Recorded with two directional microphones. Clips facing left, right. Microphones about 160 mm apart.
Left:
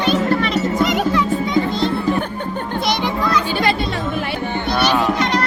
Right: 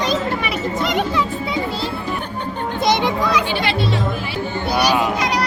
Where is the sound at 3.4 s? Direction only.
45° left (ahead or behind); by 4.6 s 60° left (ahead or behind).